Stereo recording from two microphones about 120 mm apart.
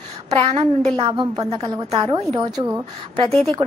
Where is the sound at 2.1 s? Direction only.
60° right (ahead or behind).